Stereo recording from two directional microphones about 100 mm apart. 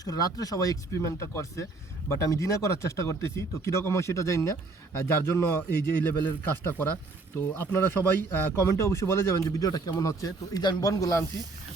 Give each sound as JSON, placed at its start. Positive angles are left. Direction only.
{"t": 0.0, "sound": "speech", "side_deg": 40}